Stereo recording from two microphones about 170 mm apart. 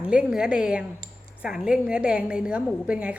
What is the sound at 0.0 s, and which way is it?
A woman's voice, 5° right (ahead or behind).